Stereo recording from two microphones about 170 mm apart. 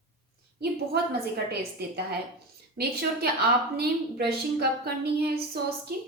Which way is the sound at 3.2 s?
70° right (ahead or behind).